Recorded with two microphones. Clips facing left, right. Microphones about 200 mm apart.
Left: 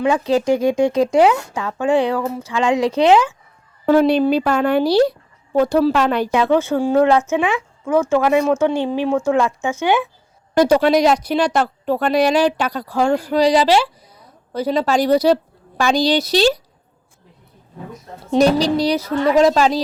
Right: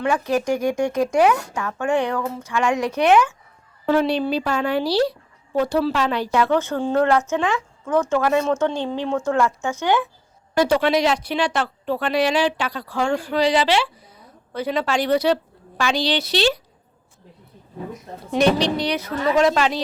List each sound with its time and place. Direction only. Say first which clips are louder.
0.0 s speech: left 4 dB; 20° left (ahead or behind)
3.8 s speech: left 6 dB; 45° left (ahead or behind)
6.3 s speech: left 2 dB; 15° left (ahead or behind)
10.6 s speech: left 5 dB; 40° left (ahead or behind)
18.3 s speech: left 4 dB; 35° left (ahead or behind)